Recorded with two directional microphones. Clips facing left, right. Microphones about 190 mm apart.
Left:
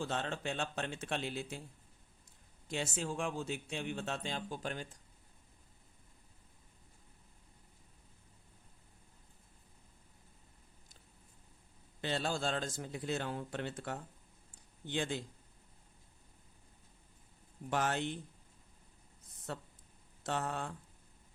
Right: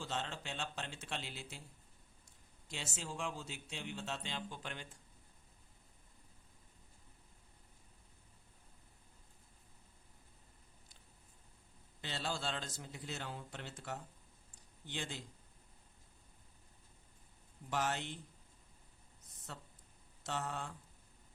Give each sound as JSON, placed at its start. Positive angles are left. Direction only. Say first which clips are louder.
{"t": 0.0, "sound": "speech", "louder": "left 5 dB", "side_deg": 55}
{"t": 2.6, "sound": "speech", "louder": "left 8 dB", "side_deg": 55}
{"t": 12.0, "sound": "a man's voice", "louder": "left 6 dB", "side_deg": 50}
{"t": 17.7, "sound": "a man's voice", "louder": "left 4 dB", "side_deg": 55}
{"t": 19.5, "sound": "a man's voice", "louder": "left 8 dB", "side_deg": 60}